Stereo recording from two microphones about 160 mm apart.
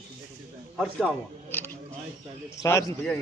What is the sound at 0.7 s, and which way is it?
Speech, centre (ahead or behind).